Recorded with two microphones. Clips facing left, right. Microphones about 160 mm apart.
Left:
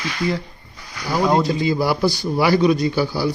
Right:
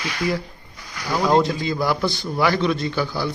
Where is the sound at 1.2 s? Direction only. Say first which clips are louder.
Left 1 dB; 10° left (ahead or behind).